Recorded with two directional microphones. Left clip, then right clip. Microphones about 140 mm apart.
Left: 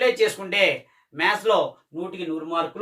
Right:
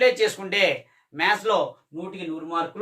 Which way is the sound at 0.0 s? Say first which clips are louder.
Right 1 dB; 30° right (ahead or behind).